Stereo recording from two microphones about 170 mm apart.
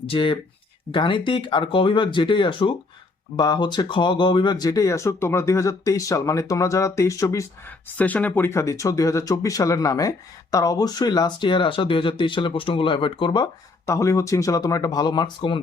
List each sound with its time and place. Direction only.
0.0 s speech: 30° left (ahead or behind)